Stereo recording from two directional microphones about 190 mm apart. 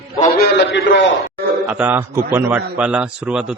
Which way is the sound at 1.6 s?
10° right (ahead or behind).